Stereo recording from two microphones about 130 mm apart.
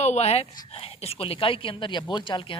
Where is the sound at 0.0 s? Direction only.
55° left (ahead or behind).